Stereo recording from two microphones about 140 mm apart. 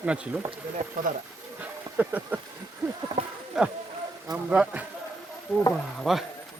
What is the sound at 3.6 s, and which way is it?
A man's voice, 5° right (ahead or behind).